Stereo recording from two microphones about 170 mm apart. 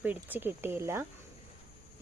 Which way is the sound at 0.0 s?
10° right (ahead or behind).